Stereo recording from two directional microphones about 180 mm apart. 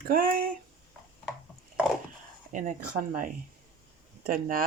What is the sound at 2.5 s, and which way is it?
Speech, 45° right (ahead or behind).